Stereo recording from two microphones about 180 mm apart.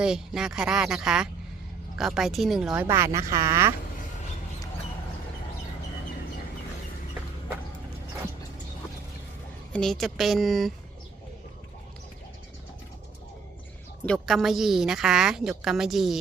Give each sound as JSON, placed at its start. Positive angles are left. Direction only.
{"t": 0.0, "sound": "a woman's voice", "side_deg": -5}
{"t": 2.8, "sound": "speech", "side_deg": -15}
{"t": 9.7, "sound": "a woman's voice", "side_deg": 5}
{"t": 14.0, "sound": "a woman's voice", "side_deg": 5}